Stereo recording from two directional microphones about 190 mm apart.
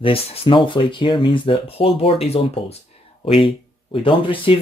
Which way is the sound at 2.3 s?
30° left (ahead or behind).